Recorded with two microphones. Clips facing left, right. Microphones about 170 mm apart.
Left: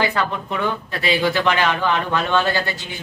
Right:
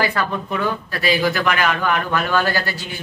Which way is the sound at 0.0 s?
20° left (ahead or behind).